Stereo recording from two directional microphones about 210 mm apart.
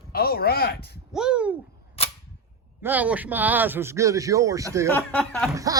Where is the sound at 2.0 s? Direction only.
30° left (ahead or behind).